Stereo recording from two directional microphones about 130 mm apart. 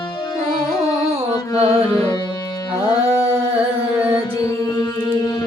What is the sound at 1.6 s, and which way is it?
Music, 50° right (ahead or behind).